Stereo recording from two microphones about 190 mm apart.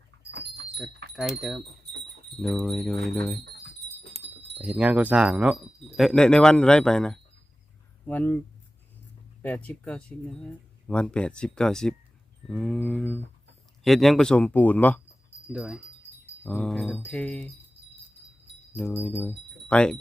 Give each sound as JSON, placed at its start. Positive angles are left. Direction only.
{"t": 0.3, "sound": "wind chime", "side_deg": -65}
{"t": 1.1, "sound": "speech", "side_deg": 0}
{"t": 2.6, "sound": "speech", "side_deg": 5}
{"t": 4.5, "sound": "speech", "side_deg": -5}
{"t": 9.4, "sound": "speech", "side_deg": 10}
{"t": 15.5, "sound": "speech", "side_deg": -5}
{"t": 18.7, "sound": "speech", "side_deg": 10}